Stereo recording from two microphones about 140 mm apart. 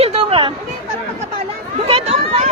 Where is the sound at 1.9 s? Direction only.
45° right (ahead or behind).